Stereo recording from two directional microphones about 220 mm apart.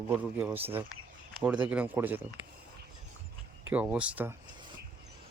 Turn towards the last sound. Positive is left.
turn(degrees=-5)  # may be behind; listen again after turning